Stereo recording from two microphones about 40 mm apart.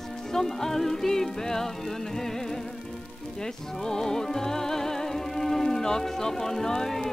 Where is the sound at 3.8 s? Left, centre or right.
Centre.